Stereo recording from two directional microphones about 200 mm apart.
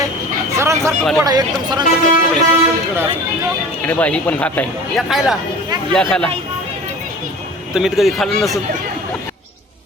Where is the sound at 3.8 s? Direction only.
5° left (ahead or behind).